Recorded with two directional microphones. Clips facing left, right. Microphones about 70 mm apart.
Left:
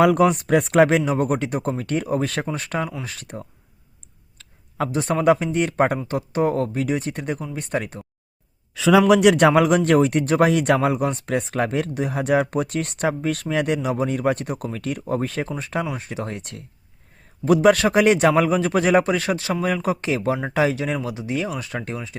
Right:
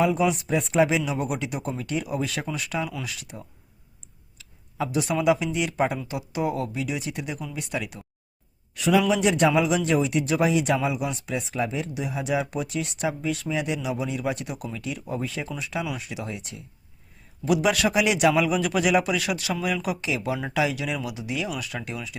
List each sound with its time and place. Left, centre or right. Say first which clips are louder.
0.0 s a man's voice: left 6 dB; left
8.9 s a man's voice: left 7 dB; left